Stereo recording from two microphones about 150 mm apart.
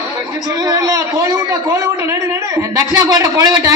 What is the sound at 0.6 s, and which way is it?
A man's voice, 25° right (ahead or behind).